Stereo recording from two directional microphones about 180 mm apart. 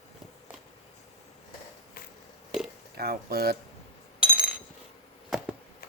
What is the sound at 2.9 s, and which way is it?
Speech, 60° right (ahead or behind).